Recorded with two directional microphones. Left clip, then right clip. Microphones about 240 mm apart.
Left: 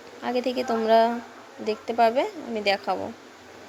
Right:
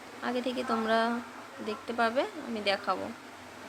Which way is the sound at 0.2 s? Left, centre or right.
Centre.